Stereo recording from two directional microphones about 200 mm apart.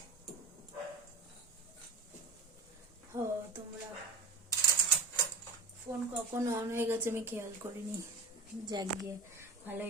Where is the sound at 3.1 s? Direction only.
15° right (ahead or behind).